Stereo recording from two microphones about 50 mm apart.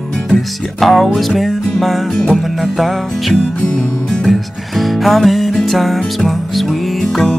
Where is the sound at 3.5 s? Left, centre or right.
Left.